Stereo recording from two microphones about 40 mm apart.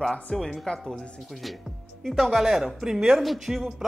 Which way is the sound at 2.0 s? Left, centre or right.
Centre.